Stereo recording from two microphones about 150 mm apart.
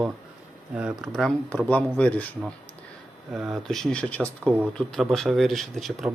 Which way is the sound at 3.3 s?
5° right (ahead or behind).